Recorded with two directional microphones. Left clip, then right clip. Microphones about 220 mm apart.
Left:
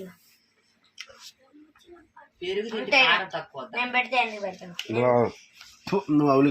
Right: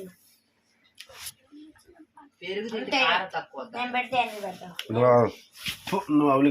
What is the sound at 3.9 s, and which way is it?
Speech, 15° right (ahead or behind).